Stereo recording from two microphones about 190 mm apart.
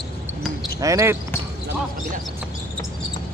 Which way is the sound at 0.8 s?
15° right (ahead or behind).